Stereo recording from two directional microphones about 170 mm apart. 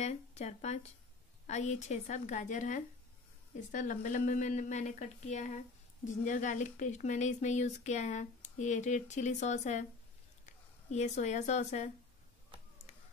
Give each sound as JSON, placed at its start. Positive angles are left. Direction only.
{"t": 0.0, "sound": "a woman's voice", "side_deg": 40}